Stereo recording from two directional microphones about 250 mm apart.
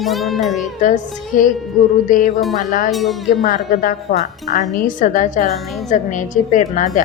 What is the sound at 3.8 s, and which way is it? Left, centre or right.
Speech, left.